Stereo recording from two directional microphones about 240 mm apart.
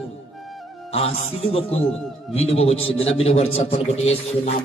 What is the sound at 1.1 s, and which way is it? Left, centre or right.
A man's voice, left.